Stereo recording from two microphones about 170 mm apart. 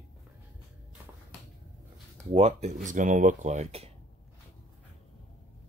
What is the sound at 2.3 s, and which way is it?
Speech, 40° right (ahead or behind).